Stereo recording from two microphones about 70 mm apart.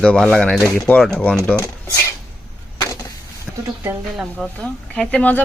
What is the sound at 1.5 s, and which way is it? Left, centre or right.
Dishes, left.